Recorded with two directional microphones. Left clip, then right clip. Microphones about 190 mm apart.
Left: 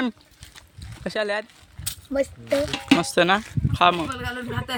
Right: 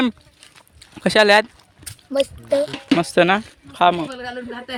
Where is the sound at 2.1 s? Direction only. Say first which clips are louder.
Right 4 dB; 15° right (ahead or behind).